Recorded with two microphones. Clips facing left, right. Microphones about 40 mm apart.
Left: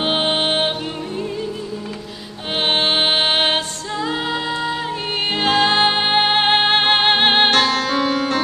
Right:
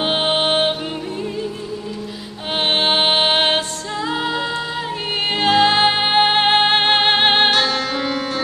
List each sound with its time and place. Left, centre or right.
0.0 s music: centre
2.5 s music: centre
7.5 s music: left